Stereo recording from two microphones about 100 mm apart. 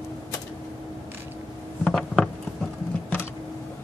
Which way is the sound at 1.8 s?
5° left (ahead or behind).